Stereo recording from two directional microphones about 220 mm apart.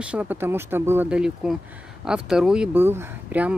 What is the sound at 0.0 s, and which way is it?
Speech, 5° right (ahead or behind).